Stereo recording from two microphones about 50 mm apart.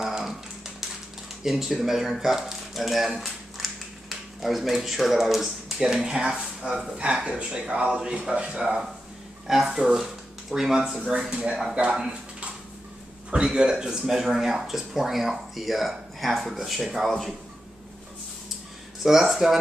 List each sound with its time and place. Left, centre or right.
0.0 s a sound: centre
1.4 s speech: centre
19.0 s speech: centre